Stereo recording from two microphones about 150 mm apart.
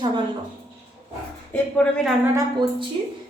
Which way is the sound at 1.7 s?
5° left (ahead or behind).